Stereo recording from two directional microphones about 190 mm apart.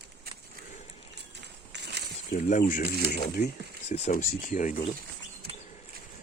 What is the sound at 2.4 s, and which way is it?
Speech, 40° left (ahead or behind).